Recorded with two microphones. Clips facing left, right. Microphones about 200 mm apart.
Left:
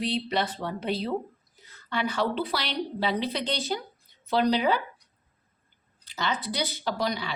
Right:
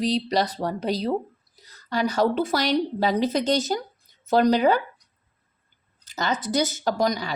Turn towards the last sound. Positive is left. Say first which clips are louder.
# right 5 dB
turn(degrees=-45)  # may be behind; listen again after turning